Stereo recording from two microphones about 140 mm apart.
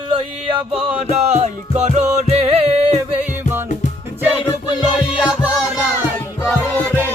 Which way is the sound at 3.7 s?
60° left (ahead or behind).